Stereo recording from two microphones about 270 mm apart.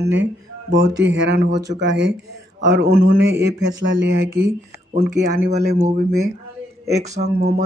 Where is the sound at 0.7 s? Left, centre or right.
Right.